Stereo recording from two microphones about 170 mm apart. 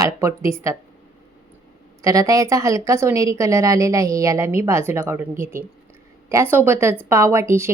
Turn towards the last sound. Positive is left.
turn(degrees=-15)  # may be behind; listen again after turning